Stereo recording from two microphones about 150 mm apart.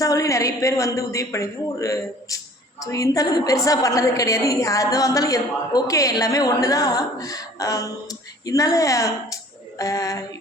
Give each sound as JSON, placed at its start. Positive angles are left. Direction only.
{"t": 0.0, "sound": "a woman's voice", "side_deg": 20}